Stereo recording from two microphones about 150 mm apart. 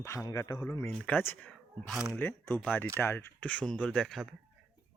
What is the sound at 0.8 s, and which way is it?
Speech, 10° left (ahead or behind).